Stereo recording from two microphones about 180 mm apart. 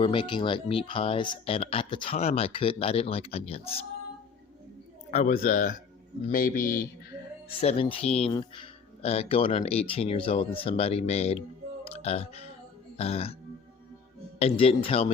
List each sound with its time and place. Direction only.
0.0 s speech: 25° left (ahead or behind)
5.1 s a man's voice: 45° left (ahead or behind)
7.6 s speech: 35° left (ahead or behind)
14.3 s speech: 35° left (ahead or behind)